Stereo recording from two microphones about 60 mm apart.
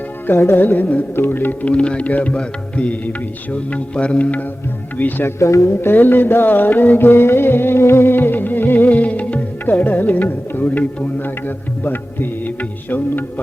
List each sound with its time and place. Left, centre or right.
0.3 s music: left
0.5 s music: left
1.6 s music: centre
5.4 s speech: left
5.8 s music: left
8.9 s music: left